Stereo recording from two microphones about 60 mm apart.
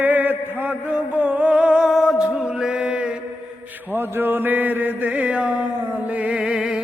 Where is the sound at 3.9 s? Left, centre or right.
Right.